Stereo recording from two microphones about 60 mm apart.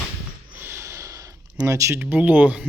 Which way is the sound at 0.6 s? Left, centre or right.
Right.